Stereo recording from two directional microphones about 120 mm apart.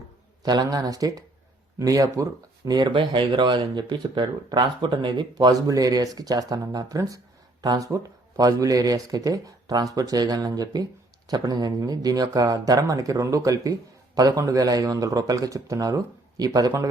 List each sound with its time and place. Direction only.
0.4 s speech: 35° right (ahead or behind)